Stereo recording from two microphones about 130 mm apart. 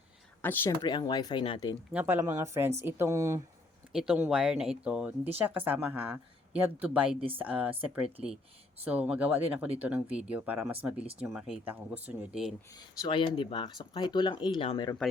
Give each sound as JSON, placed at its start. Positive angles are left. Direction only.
{"t": 0.4, "sound": "speech", "side_deg": 15}
{"t": 0.8, "sound": "speech", "side_deg": 35}
{"t": 1.9, "sound": "a woman's voice", "side_deg": -15}
{"t": 3.9, "sound": "a woman's voice", "side_deg": -5}
{"t": 11.6, "sound": "a woman's voice", "side_deg": -15}
{"t": 12.7, "sound": "speech", "side_deg": 35}